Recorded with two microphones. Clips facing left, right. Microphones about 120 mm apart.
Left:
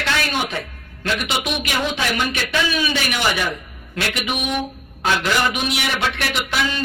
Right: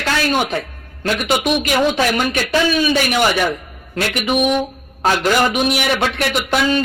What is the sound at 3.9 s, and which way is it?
A man's voice, 40° right (ahead or behind).